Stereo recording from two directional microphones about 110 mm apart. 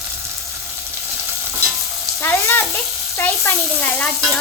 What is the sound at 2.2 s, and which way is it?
Frying, 25° left (ahead or behind).